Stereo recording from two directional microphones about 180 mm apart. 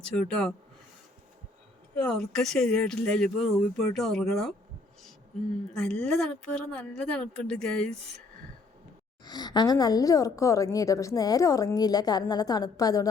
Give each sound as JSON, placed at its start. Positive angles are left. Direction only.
{"t": 0.0, "sound": "speech", "side_deg": 5}
{"t": 2.0, "sound": "speech", "side_deg": 5}
{"t": 5.8, "sound": "speech", "side_deg": 5}
{"t": 9.2, "sound": "a woman's voice", "side_deg": 25}